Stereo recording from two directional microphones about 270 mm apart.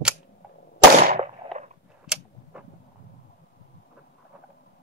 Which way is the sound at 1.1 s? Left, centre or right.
Right.